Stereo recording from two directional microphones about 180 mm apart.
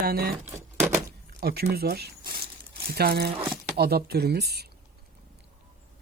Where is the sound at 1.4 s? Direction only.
60° right (ahead or behind).